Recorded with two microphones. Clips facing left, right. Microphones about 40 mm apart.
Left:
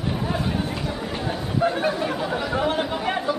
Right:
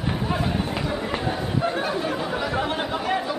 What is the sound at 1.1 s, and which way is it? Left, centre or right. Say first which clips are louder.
Chatter: right 2 dB; centre.